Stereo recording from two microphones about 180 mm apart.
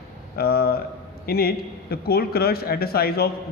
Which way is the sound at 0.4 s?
60° left (ahead or behind).